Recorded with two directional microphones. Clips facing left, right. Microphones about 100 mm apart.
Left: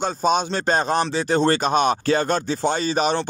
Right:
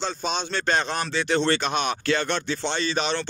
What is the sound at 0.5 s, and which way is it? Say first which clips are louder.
Speech: left 4 dB; 30° left (ahead or behind).